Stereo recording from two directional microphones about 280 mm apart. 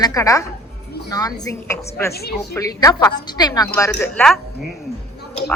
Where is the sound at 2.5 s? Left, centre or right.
Centre.